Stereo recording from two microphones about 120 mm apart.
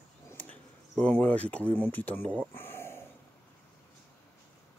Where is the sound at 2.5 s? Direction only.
20° left (ahead or behind).